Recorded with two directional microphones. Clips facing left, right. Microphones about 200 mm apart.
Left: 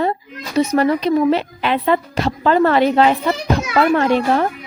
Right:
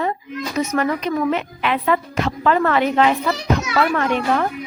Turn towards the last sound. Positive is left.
turn(degrees=35)  # may be behind; listen again after turning